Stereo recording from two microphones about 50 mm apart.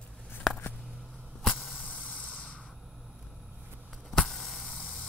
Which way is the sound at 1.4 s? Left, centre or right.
Centre.